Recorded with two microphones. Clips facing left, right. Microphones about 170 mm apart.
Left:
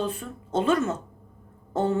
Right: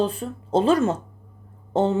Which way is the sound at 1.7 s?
25° right (ahead or behind).